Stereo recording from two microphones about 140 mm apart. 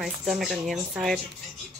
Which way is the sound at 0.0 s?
Centre (ahead or behind).